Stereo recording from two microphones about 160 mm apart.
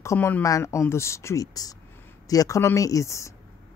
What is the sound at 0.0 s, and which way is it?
Speech, 15° left (ahead or behind).